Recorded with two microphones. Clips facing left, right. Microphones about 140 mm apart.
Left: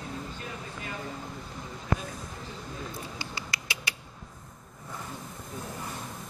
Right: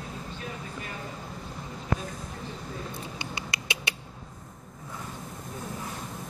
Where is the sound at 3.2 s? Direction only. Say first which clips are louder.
Right 2 dB; 20° right (ahead or behind).